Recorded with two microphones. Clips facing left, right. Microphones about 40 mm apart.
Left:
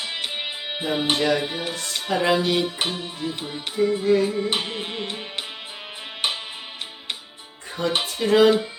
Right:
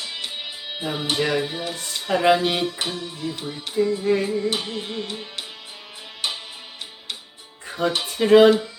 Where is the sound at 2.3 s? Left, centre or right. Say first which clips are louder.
Right 3 dB; right.